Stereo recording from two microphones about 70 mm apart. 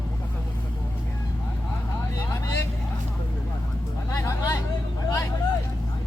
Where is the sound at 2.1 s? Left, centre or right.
Left.